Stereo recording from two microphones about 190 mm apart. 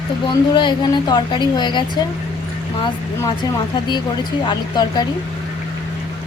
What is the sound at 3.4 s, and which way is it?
A woman's voice, 25° left (ahead or behind).